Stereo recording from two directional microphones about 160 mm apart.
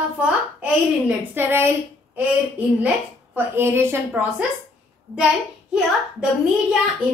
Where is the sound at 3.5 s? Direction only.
15° right (ahead or behind).